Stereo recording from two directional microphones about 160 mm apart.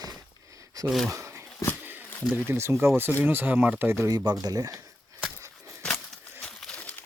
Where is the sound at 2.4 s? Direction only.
15° right (ahead or behind).